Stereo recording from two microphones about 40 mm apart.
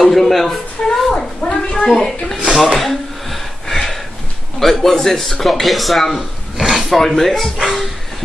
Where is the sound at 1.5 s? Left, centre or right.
Centre.